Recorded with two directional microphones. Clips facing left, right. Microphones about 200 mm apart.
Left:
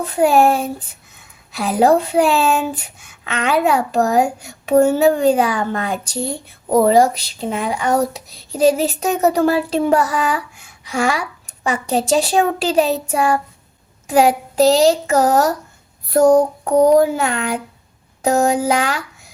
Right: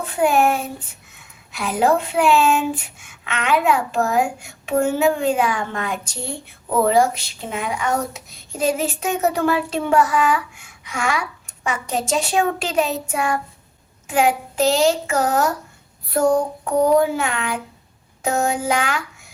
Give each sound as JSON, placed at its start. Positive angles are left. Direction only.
{"t": 0.0, "sound": "speech", "side_deg": 35}